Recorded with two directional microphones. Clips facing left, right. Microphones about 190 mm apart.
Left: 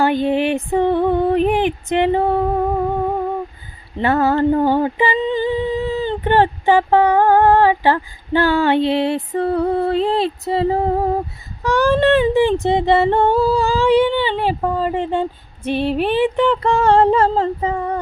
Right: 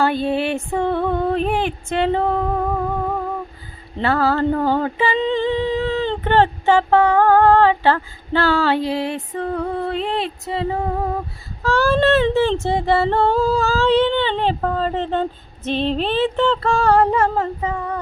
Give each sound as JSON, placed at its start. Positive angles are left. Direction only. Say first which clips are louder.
{"t": 0.0, "sound": "female singing", "louder": "left 3 dB", "side_deg": 15}
{"t": 4.0, "sound": "child singing", "louder": "left 3 dB", "side_deg": 20}
{"t": 5.2, "sound": "a sound", "louder": "even", "side_deg": 5}
{"t": 11.6, "sound": "child singing", "louder": "left 2 dB", "side_deg": 15}